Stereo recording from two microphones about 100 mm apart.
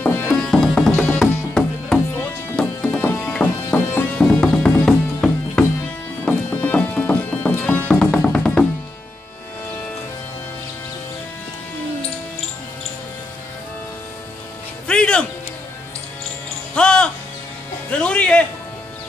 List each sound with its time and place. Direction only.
0.0 s music: 20° left (ahead or behind)
0.3 s music: 5° left (ahead or behind)
14.9 s music: 10° left (ahead or behind)
16.7 s music: 10° left (ahead or behind)